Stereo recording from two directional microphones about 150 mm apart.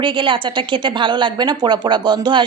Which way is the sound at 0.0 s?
35° right (ahead or behind).